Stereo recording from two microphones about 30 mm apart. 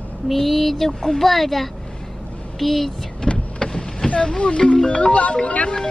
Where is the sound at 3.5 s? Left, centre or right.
Left.